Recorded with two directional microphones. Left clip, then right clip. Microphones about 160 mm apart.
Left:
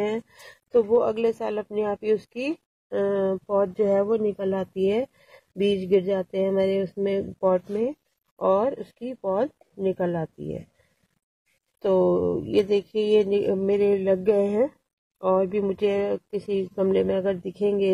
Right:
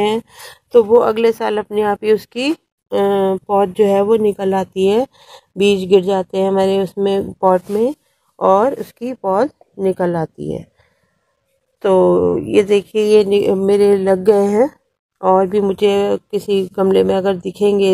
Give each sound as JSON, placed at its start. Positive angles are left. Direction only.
{"t": 0.1, "sound": "speech", "side_deg": -5}
{"t": 3.0, "sound": "speech", "side_deg": -20}
{"t": 4.0, "sound": "speech", "side_deg": -5}
{"t": 12.0, "sound": "speech", "side_deg": -20}
{"t": 12.4, "sound": "speech", "side_deg": 10}
{"t": 13.1, "sound": "speech", "side_deg": -5}